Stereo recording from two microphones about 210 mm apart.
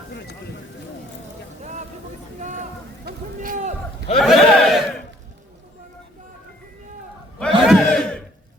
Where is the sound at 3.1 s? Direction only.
40° right (ahead or behind).